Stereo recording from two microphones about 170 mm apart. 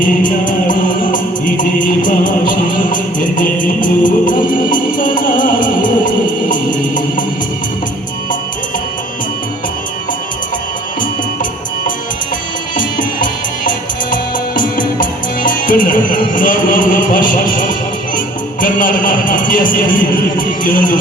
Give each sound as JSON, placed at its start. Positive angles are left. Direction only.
{"t": 0.0, "sound": "music", "side_deg": 50}
{"t": 13.0, "sound": "music", "side_deg": 50}
{"t": 18.6, "sound": "a sound", "side_deg": 55}